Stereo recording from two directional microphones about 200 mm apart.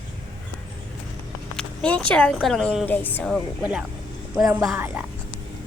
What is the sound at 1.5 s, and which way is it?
Speech, 5° left (ahead or behind).